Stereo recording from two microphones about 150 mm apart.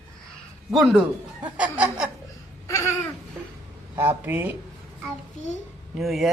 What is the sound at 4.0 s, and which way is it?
Snicker, 15° right (ahead or behind).